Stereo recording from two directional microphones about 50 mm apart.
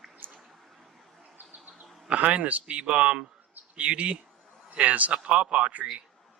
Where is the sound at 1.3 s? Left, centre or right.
Right.